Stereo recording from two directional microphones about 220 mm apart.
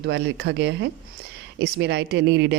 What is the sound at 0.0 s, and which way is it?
Speech, 50° right (ahead or behind).